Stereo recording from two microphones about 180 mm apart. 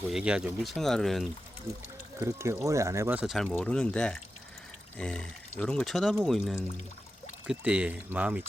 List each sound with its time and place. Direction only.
0.1 s speech: 5° right (ahead or behind)
2.1 s speech: 15° right (ahead or behind)
3.3 s speech: 5° left (ahead or behind)